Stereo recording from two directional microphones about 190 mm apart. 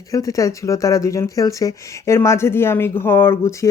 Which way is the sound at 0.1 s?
20° left (ahead or behind).